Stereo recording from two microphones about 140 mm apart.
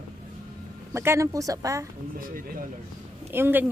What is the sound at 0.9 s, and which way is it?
Speech, 20° right (ahead or behind).